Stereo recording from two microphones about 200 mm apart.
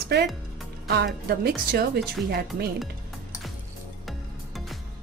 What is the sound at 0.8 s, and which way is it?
Speech, 55° right (ahead or behind).